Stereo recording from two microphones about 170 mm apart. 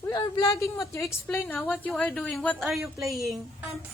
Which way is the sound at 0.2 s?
20° left (ahead or behind).